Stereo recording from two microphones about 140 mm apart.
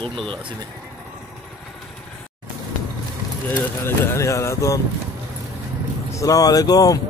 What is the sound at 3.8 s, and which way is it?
Speech, 20° left (ahead or behind).